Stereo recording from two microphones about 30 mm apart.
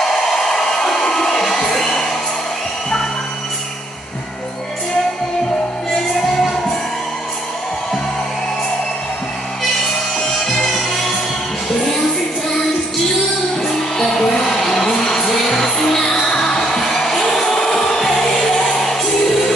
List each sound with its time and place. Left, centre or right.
0.0 s hair dryer: centre
10.1 s music: centre
13.6 s music: centre